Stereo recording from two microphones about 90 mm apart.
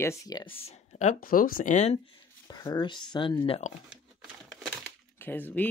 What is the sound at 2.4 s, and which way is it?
Speech, 50° left (ahead or behind).